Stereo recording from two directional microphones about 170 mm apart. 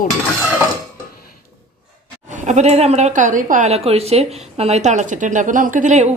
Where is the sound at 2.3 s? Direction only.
45° right (ahead or behind).